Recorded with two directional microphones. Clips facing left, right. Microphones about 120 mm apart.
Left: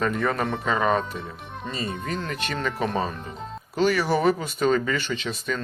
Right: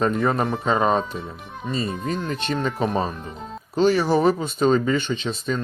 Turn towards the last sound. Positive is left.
turn(degrees=-25)  # may be behind; listen again after turning